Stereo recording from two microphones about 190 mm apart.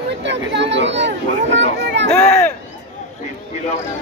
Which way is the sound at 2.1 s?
10° left (ahead or behind).